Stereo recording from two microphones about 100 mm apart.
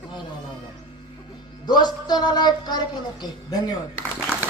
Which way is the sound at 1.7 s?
45° left (ahead or behind).